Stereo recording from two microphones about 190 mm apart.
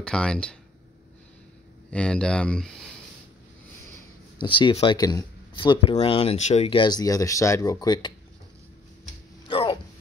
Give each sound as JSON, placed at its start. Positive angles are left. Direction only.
{"t": 0.0, "sound": "speech", "side_deg": 5}
{"t": 1.9, "sound": "speech", "side_deg": 5}
{"t": 4.4, "sound": "speech", "side_deg": 25}
{"t": 9.5, "sound": "a sound", "side_deg": 25}